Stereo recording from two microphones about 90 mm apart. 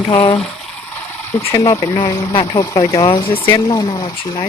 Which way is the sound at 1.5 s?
45° left (ahead or behind).